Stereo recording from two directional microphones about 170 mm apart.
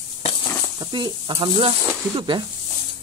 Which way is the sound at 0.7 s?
25° right (ahead or behind).